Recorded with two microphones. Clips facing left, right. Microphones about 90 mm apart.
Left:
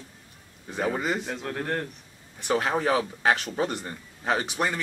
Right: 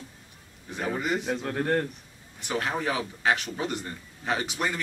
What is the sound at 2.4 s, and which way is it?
A man's voice, 40° left (ahead or behind).